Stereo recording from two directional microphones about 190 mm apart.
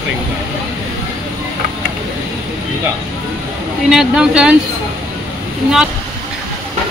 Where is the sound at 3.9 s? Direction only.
5° right (ahead or behind).